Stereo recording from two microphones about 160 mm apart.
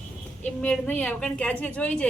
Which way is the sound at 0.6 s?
10° left (ahead or behind).